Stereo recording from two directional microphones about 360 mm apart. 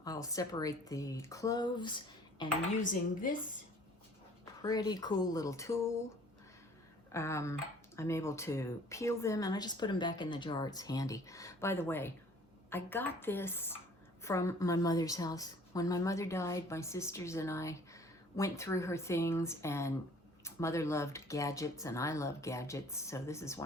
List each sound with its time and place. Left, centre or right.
0.0 s a woman's voice: centre
4.6 s a woman's voice: centre
7.1 s a woman's voice: centre